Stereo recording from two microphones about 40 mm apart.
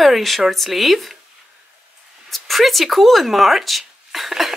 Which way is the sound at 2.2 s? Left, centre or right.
Centre.